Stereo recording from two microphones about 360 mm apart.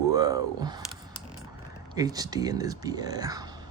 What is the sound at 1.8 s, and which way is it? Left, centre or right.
Speech, centre.